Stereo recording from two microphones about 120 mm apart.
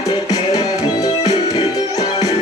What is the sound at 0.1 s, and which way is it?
Music, 35° left (ahead or behind).